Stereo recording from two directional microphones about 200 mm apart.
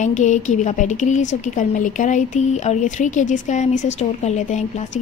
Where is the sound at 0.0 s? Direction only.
35° left (ahead or behind).